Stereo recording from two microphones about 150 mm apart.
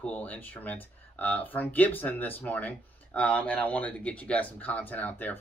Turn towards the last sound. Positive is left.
turn(degrees=10)  # may be behind; listen again after turning